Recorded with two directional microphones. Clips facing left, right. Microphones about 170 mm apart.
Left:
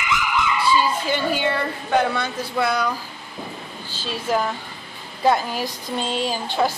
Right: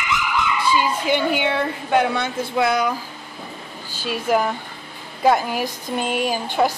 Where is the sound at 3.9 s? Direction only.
10° right (ahead or behind).